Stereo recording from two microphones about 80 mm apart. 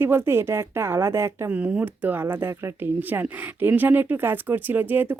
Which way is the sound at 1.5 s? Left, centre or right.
Centre.